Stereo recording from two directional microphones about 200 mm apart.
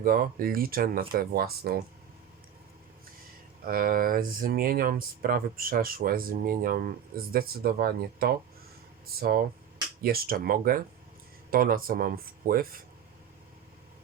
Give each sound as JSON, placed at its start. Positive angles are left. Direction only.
{"t": 0.0, "sound": "speech", "side_deg": -45}
{"t": 3.7, "sound": "speech", "side_deg": -45}